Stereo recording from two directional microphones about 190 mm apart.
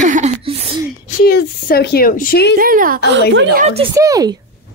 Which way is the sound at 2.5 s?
50° right (ahead or behind).